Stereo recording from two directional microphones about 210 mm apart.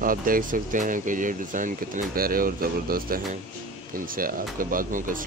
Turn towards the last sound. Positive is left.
turn(degrees=-40)  # may be behind; listen again after turning